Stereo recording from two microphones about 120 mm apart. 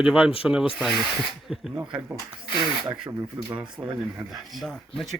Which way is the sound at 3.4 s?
30° right (ahead or behind).